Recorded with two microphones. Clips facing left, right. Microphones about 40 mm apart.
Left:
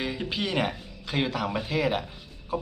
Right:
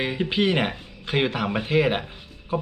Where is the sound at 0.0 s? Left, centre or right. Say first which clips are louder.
Right 7 dB; right.